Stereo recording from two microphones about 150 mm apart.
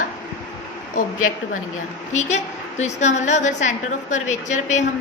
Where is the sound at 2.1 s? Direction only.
50° left (ahead or behind).